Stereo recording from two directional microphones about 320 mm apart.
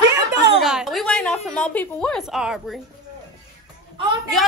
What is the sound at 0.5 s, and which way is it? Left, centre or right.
A woman's voice, centre.